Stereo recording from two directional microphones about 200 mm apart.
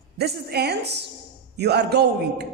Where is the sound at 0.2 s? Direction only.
55° right (ahead or behind).